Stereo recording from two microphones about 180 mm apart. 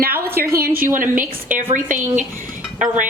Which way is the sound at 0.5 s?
55° right (ahead or behind).